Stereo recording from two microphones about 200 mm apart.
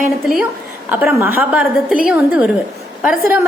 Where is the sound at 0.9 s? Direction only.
10° right (ahead or behind).